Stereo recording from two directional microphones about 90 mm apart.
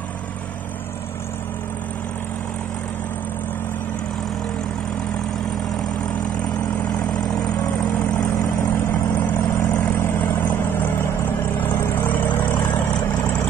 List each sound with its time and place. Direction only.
9.1 s vehicle: 20° left (ahead or behind)